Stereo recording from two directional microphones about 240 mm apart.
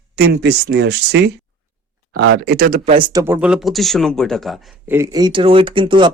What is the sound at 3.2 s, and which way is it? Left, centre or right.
A man's voice, centre.